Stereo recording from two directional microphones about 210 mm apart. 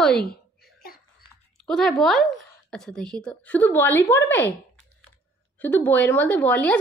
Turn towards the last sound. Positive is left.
turn(degrees=5)  # may be behind; listen again after turning